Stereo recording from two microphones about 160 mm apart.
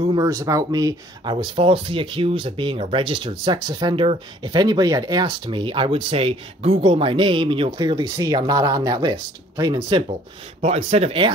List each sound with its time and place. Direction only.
0.1 s speech: 20° right (ahead or behind)
10.6 s speech: 45° right (ahead or behind)